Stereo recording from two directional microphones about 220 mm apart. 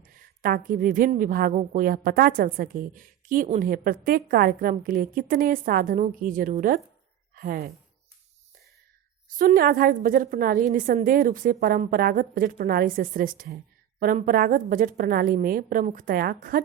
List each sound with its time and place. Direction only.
0.0 s a woman's voice: 40° right (ahead or behind)
9.3 s a woman's voice: 40° right (ahead or behind)